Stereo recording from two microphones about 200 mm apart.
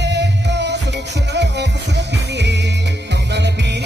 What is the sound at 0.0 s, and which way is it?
Music, 60° right (ahead or behind).